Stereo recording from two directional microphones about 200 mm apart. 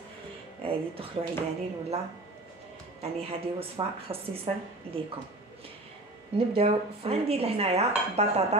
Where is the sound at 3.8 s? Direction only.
25° right (ahead or behind).